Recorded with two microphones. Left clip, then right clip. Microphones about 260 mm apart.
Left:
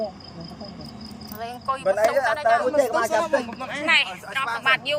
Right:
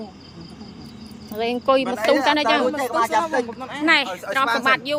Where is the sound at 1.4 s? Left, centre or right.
Right.